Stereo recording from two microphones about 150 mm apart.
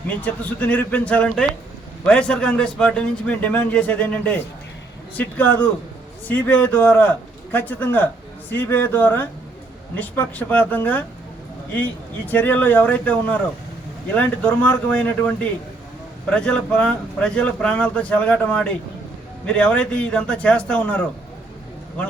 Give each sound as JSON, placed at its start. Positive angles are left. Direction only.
{"t": 0.1, "sound": "a man's voice", "side_deg": 10}